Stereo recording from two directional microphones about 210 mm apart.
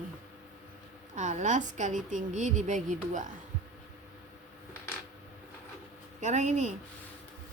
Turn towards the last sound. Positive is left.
turn(degrees=-35)  # may be behind; listen again after turning